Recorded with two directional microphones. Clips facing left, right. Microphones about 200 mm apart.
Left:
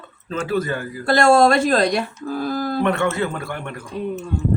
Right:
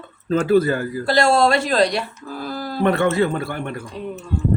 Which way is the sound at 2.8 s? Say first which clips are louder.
Right 5 dB; 35° right (ahead or behind).